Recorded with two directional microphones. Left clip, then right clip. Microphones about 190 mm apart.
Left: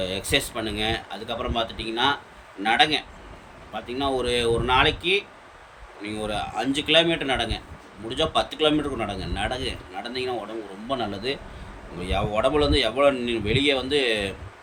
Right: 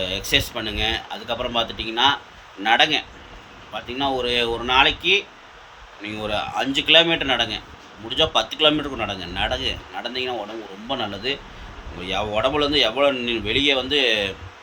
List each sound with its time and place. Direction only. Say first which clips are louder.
0.0 s speech: right 3 dB; 10° left (ahead or behind)